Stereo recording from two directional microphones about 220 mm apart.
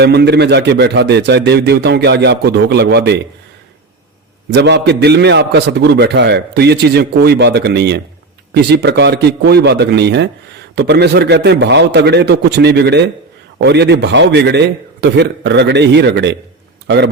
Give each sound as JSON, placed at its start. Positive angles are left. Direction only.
{"t": 0.0, "sound": "a man's voice", "side_deg": -50}
{"t": 4.5, "sound": "a man's voice", "side_deg": -50}